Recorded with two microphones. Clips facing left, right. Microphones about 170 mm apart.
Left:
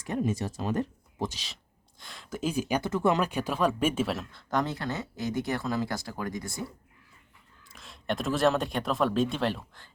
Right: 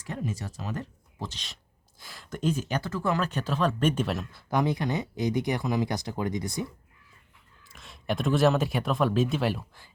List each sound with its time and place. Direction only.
0.0 s speech: 20° left (ahead or behind)
2.0 s speech: centre (ahead or behind); by 6.7 s 20° right (ahead or behind)
7.6 s speech: centre (ahead or behind)